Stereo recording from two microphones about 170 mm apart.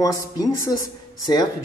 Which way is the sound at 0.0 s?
20° left (ahead or behind).